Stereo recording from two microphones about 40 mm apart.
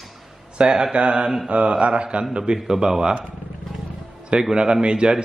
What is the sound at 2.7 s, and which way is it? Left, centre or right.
Speech, centre.